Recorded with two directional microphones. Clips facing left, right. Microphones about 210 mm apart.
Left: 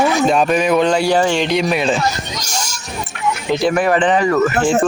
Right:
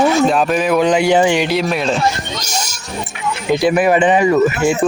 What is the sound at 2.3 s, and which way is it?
Speech, 20° right (ahead or behind).